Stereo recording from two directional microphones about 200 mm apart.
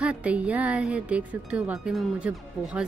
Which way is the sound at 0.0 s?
5° right (ahead or behind).